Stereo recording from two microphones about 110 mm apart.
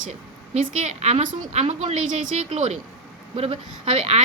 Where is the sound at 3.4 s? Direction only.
65° right (ahead or behind).